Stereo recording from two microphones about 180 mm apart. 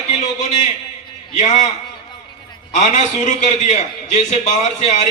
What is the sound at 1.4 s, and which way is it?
Speech, 40° left (ahead or behind).